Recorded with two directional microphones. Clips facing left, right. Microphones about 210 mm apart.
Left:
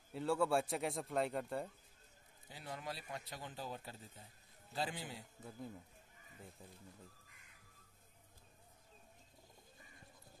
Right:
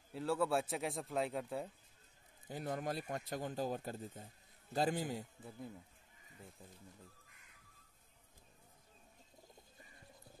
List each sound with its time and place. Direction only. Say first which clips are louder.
0.1 s a man's voice: even; centre (ahead or behind)
2.4 s speech: right 7 dB; 50° right (ahead or behind)